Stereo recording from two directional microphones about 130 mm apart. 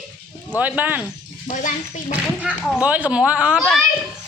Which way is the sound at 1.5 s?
80° left.